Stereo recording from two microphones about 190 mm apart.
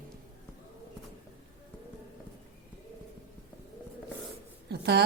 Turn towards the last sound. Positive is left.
turn(degrees=-60)  # may be behind; listen again after turning